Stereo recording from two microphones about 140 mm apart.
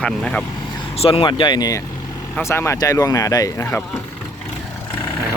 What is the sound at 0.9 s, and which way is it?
Speech, 45° left (ahead or behind).